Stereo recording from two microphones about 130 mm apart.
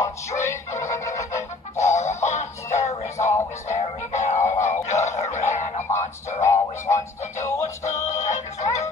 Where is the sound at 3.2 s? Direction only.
25° left (ahead or behind).